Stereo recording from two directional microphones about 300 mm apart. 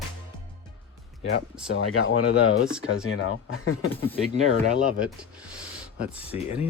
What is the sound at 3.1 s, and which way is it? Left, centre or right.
Speech, left.